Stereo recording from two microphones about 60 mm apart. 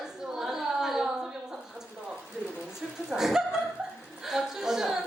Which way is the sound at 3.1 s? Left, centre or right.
Centre.